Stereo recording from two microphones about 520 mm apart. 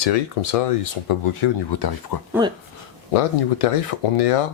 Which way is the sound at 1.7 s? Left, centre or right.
Left.